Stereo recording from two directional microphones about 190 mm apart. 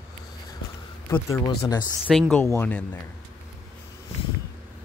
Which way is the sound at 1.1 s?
15° left (ahead or behind).